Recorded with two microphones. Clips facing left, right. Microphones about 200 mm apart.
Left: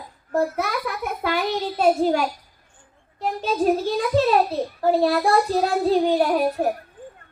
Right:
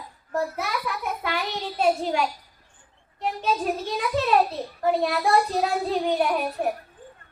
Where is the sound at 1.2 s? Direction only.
40° left (ahead or behind).